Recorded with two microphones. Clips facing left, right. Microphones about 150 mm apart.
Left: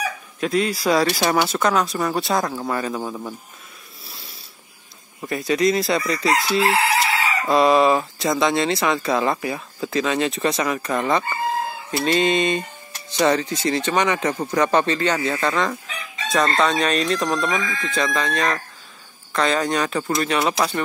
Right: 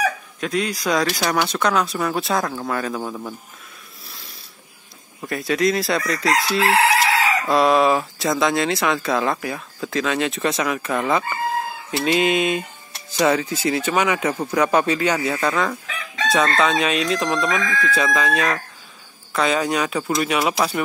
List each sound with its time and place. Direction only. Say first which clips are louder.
0.4 s speech: left 3 dB; centre (ahead or behind)
4.0 s a sound: left 1 dB; centre (ahead or behind)
5.2 s speech: left 1 dB; centre (ahead or behind)
6.6 s crowing: right 2 dB; 90° right
7.4 s speech: left 2 dB; centre (ahead or behind)